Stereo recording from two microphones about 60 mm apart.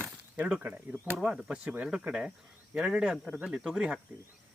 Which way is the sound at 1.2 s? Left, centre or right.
Centre.